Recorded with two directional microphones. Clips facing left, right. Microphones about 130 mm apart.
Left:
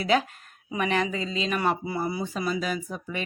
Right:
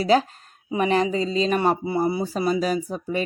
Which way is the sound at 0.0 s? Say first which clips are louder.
Right 5 dB; 35° right (ahead or behind).